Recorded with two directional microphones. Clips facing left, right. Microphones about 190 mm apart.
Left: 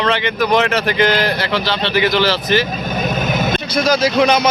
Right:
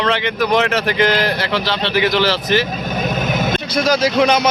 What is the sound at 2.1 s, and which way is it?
Speech, 45° left (ahead or behind).